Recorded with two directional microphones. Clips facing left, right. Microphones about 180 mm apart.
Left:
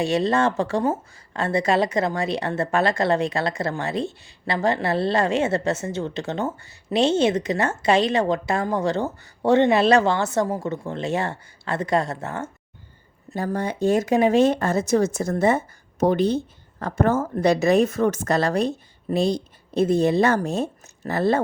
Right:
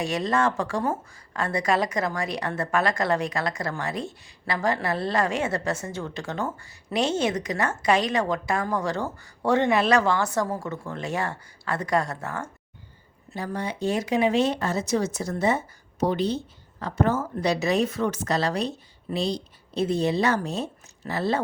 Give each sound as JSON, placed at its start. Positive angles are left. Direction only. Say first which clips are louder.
{"t": 0.0, "sound": "a woman's voice", "louder": "left 4 dB", "side_deg": 30}
{"t": 13.3, "sound": "speech", "louder": "left 5 dB", "side_deg": 45}